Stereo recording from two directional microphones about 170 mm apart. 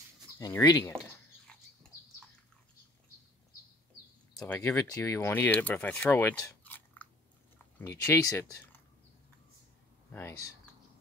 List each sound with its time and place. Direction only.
0.4 s speech: 20° left (ahead or behind)
1.5 s a sound: 5° left (ahead or behind)
4.6 s speech: 15° left (ahead or behind)